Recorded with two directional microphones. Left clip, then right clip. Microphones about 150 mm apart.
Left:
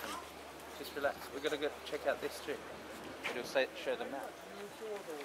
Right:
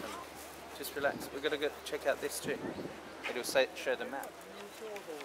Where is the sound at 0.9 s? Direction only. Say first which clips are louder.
Right 3 dB; 40° right (ahead or behind).